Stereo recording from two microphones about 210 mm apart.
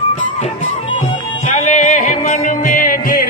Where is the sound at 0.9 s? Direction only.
25° left (ahead or behind); by 3.3 s 40° left (ahead or behind).